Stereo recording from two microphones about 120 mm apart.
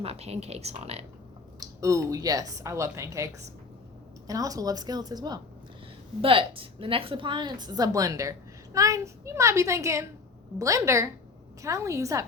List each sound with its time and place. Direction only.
0.0 s a woman's voice: 60° right (ahead or behind)
1.5 s a woman's voice: 30° right (ahead or behind)
6.2 s a woman's voice: 50° right (ahead or behind); by 12.2 s 25° right (ahead or behind)